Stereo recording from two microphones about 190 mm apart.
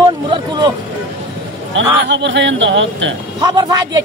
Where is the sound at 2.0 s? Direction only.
70° right (ahead or behind).